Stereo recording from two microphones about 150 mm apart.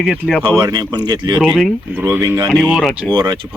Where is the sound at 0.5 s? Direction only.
30° right (ahead or behind).